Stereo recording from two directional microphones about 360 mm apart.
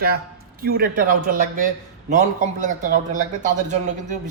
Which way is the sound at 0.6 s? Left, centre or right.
Right.